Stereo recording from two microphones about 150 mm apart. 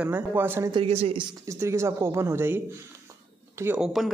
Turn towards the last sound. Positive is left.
turn(degrees=0)  # may be behind; listen again after turning